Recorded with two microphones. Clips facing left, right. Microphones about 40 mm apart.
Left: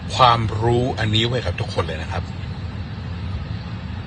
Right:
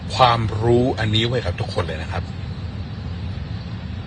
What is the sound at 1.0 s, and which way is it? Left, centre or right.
Speech, left.